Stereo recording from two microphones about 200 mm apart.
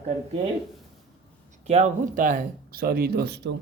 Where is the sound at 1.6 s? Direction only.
35° right (ahead or behind).